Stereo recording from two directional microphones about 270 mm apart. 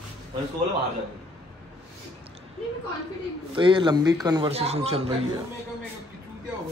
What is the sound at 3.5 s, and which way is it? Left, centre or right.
Speech, centre.